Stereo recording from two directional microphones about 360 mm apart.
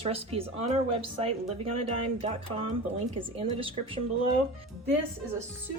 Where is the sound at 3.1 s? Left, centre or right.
Centre.